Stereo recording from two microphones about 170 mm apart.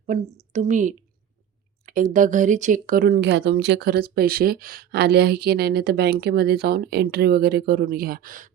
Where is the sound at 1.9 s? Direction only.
55° right (ahead or behind).